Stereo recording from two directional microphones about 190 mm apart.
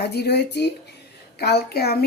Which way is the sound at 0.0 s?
60° left (ahead or behind).